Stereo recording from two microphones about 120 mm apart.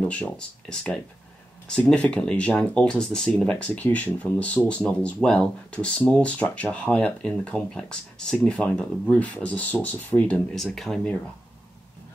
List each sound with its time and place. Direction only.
0.0 s speech: 10° left (ahead or behind)